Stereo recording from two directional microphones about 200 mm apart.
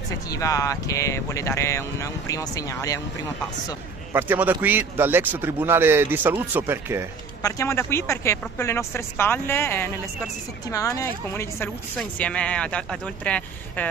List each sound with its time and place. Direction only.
0.3 s speech: 15° left (ahead or behind)
4.1 s a man's voice: 10° right (ahead or behind)
7.4 s speech: 15° left (ahead or behind)